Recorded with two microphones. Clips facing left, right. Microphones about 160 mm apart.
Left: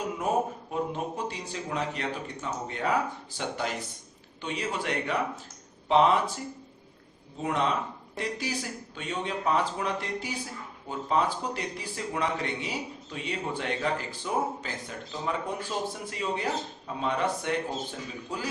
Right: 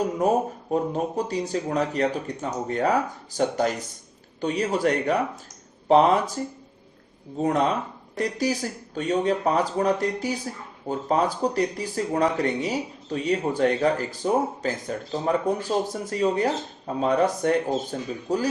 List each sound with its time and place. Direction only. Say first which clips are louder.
0.2 s speech: right 3 dB; 40° right (ahead or behind)